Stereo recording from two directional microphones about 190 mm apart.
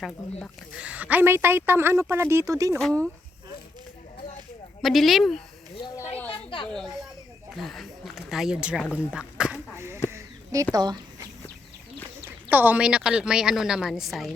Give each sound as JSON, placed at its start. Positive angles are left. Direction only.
{"t": 0.0, "sound": "a woman's voice", "side_deg": 5}
{"t": 0.8, "sound": "a woman's voice", "side_deg": -5}
{"t": 2.7, "sound": "a woman's voice", "side_deg": 5}
{"t": 4.8, "sound": "a woman's voice", "side_deg": 0}
{"t": 6.3, "sound": "a sound", "side_deg": 25}
{"t": 6.7, "sound": "speech", "side_deg": 0}
{"t": 10.1, "sound": "a sound", "side_deg": -15}
{"t": 10.8, "sound": "speech", "side_deg": -20}
{"t": 12.5, "sound": "a woman's voice", "side_deg": -10}